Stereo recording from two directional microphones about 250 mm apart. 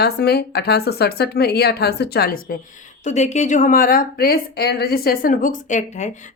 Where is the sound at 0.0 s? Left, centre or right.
Left.